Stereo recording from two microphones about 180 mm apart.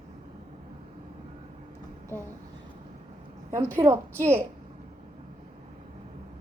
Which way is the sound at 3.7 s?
15° right (ahead or behind).